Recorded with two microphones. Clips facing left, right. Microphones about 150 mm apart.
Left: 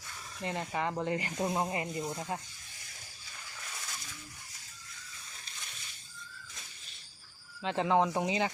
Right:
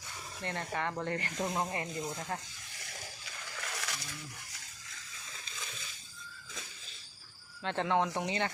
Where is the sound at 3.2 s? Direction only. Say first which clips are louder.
Right 1 dB; 85° right.